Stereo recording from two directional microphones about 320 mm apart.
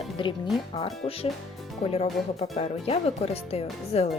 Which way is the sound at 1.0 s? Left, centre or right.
Centre.